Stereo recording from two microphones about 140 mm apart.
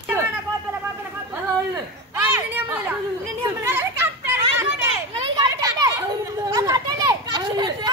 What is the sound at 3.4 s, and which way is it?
Children playing, 15° right (ahead or behind).